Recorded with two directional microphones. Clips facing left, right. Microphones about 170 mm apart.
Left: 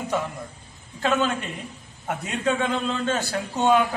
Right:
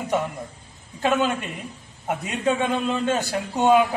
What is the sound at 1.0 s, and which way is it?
A man's voice, 10° right (ahead or behind).